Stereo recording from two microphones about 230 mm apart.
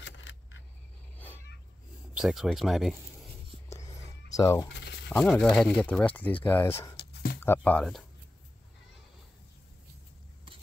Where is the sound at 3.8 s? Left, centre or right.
Left.